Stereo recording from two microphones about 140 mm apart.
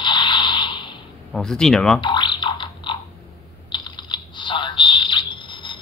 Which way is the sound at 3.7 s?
35° left (ahead or behind).